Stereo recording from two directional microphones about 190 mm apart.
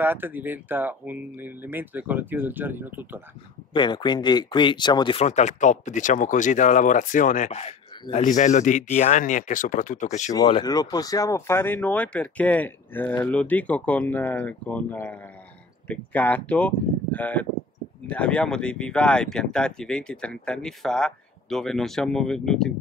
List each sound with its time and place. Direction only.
0.0 s speech: 10° right (ahead or behind)
3.7 s speech: 25° left (ahead or behind)
5.2 s speech: 35° left (ahead or behind)
10.6 s speech: 20° left (ahead or behind); by 22.7 s 5° left (ahead or behind)